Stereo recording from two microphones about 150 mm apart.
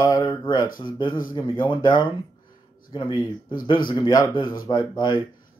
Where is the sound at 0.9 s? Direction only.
30° left (ahead or behind).